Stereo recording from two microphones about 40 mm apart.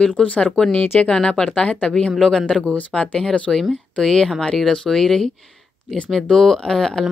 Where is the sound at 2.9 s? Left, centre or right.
Centre.